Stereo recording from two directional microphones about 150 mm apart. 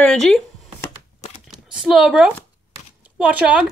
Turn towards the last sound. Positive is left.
turn(degrees=-10)  # may be behind; listen again after turning